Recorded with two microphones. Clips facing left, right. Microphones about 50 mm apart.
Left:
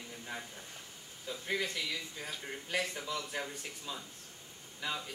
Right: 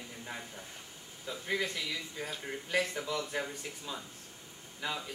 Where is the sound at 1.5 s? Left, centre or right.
Centre.